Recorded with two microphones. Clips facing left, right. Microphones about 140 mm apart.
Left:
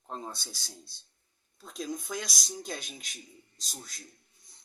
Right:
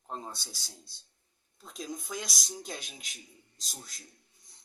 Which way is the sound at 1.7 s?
10° right (ahead or behind).